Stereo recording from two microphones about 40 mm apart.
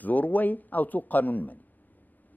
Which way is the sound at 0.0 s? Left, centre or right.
Left.